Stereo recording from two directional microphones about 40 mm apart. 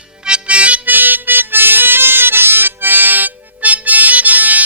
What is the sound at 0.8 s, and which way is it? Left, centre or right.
Music, right.